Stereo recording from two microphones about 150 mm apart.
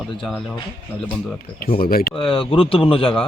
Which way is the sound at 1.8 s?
85° left.